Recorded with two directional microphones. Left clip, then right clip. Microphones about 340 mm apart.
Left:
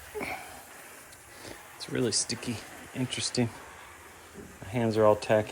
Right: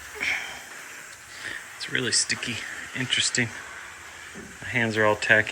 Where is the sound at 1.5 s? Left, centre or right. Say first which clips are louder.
Right 7 dB; centre.